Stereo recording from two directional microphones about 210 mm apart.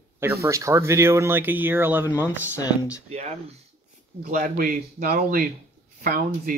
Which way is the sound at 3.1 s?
30° right (ahead or behind).